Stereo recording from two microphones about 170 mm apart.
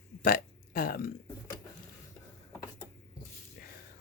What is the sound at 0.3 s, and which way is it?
Speech, 60° left (ahead or behind).